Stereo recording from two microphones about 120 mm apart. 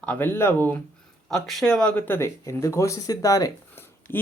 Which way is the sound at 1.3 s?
Centre (ahead or behind).